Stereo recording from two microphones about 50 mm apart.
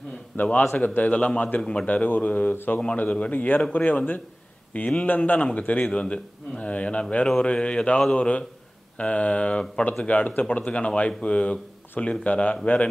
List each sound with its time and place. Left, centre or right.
0.4 s speech: left
1.2 s a man's voice: left
1.9 s speech: left
3.0 s a man's voice: left